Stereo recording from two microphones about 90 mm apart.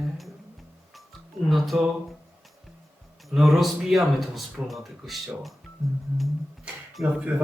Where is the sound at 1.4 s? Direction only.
Centre (ahead or behind).